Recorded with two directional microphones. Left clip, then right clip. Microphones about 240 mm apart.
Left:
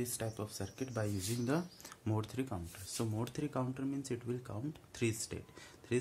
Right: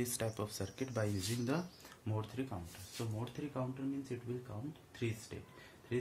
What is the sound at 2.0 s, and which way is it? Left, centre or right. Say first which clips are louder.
Speech: left 3 dB; left.